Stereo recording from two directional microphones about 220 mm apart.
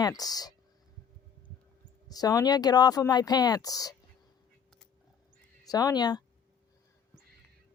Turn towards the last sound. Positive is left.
turn(degrees=20)  # may be behind; listen again after turning